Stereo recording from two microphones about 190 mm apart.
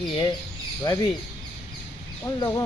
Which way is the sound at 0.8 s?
20° left (ahead or behind).